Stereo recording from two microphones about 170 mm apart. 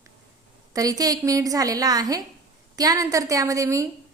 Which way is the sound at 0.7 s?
20° right (ahead or behind).